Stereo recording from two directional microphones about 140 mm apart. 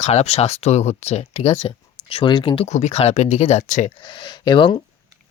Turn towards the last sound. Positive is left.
turn(degrees=35)  # may be behind; listen again after turning